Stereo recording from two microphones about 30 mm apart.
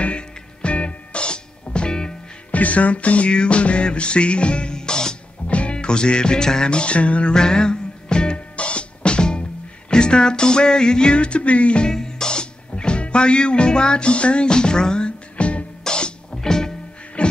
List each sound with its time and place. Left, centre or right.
0.0 s music: left
2.5 s music: left
4.7 s music: left
5.5 s music: left
6.7 s music: left
7.3 s music: left
8.5 s music: left
11.1 s music: left
11.9 s music: left
15.8 s music: left
16.3 s music: centre
17.2 s music: left